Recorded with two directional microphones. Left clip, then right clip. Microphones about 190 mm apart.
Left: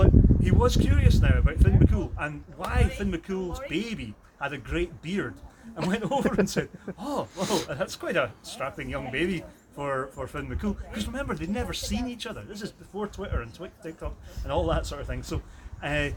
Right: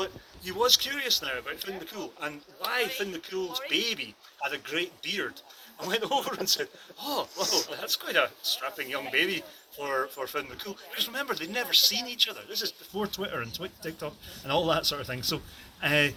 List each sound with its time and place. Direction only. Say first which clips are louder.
0.0 s speech: left 10 dB; 15° left (ahead or behind)